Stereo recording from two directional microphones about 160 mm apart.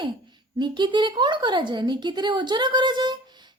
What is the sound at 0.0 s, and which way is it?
A woman's voice, 30° right (ahead or behind).